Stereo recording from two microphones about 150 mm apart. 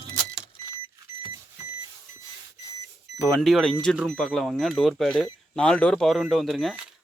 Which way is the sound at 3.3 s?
Centre (ahead or behind).